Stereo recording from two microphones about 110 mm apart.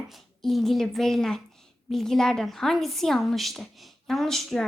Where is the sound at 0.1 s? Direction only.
Centre (ahead or behind).